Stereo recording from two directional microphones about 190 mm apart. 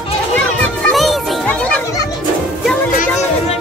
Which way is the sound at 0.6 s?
5° left (ahead or behind).